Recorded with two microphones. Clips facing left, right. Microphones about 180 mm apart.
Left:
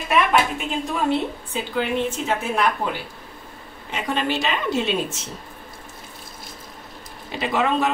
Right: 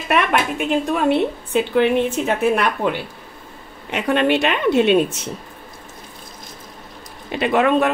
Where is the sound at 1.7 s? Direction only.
65° right (ahead or behind).